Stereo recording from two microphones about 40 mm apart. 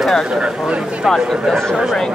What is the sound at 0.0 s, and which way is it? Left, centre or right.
Speech, centre.